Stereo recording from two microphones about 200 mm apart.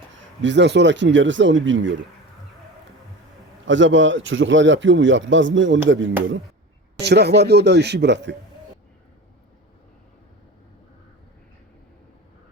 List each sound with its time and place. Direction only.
0.1 s speech: 65° right (ahead or behind)
3.7 s a man's voice: 70° right (ahead or behind)
7.0 s speech: 55° right (ahead or behind)